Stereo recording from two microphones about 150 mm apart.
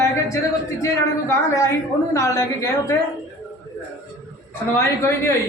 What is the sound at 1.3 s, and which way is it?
A woman's voice, 20° left (ahead or behind).